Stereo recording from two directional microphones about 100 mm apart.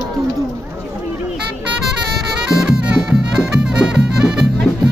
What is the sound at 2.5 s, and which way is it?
Music, 5° right (ahead or behind).